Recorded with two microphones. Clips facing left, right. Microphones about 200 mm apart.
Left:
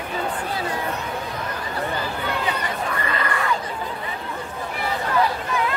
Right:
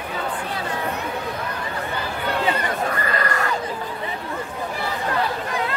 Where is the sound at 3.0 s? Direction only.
40° right (ahead or behind).